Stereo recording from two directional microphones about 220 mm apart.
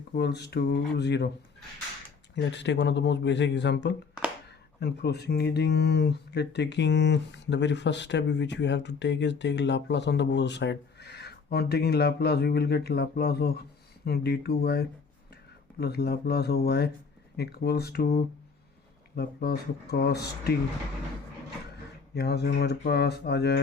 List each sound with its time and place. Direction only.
0.2 s speech: 50° left (ahead or behind)
2.3 s speech: 55° left (ahead or behind)
22.1 s speech: 45° left (ahead or behind)